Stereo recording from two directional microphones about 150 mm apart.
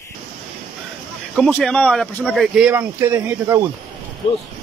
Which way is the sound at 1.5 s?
5° left (ahead or behind).